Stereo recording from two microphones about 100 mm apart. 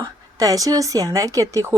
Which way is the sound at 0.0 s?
35° right (ahead or behind).